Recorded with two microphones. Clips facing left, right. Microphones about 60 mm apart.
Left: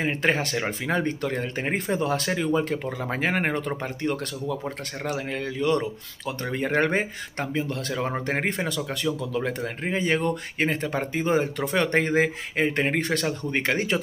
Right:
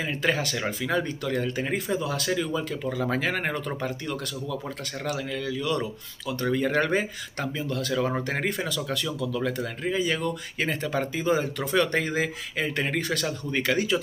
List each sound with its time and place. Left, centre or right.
0.0 s speech: left
2.9 s speech: left